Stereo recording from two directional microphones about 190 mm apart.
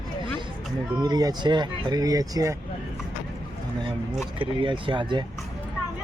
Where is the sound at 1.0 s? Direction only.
20° right (ahead or behind).